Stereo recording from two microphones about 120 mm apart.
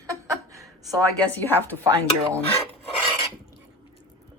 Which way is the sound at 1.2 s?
15° left (ahead or behind).